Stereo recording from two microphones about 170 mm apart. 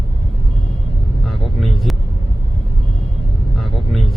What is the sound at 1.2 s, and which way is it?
Speech, centre (ahead or behind).